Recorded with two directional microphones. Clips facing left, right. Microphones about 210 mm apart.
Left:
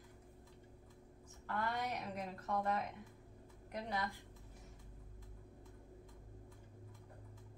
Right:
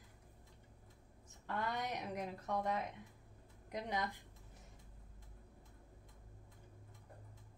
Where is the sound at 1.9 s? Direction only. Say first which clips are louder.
Right 1 dB; 15° right (ahead or behind).